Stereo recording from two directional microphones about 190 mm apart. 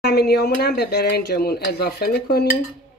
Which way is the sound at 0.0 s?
55° left (ahead or behind).